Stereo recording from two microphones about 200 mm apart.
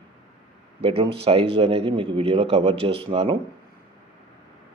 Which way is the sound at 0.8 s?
30° right (ahead or behind).